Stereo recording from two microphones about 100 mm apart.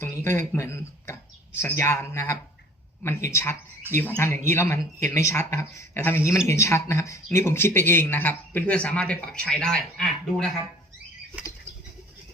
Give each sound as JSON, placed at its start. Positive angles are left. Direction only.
{"t": 0.0, "sound": "speech", "side_deg": 25}
{"t": 3.9, "sound": "speech", "side_deg": -20}
{"t": 4.2, "sound": "speech", "side_deg": 25}